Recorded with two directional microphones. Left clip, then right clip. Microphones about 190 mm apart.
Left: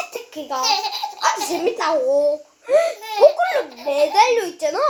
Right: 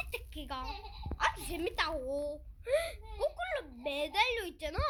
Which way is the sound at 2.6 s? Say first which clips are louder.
Left 16 dB; 15° right (ahead or behind).